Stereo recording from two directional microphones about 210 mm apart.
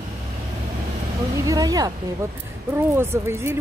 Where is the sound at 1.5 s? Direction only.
20° right (ahead or behind).